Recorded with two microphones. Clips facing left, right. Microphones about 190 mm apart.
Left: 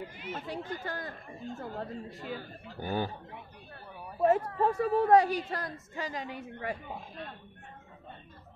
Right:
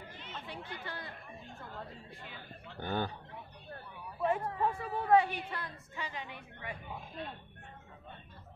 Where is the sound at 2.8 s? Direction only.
10° left (ahead or behind).